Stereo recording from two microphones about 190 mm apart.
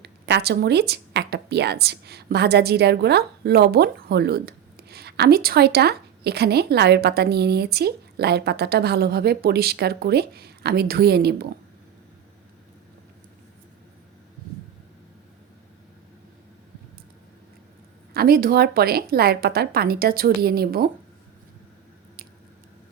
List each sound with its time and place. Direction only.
0.0 s speech: 60° right (ahead or behind)
18.1 s a woman's voice: 55° right (ahead or behind)